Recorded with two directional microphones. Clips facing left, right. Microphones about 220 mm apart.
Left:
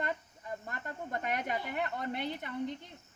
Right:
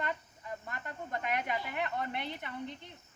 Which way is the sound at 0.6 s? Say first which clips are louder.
Left 1 dB; 40° left (ahead or behind).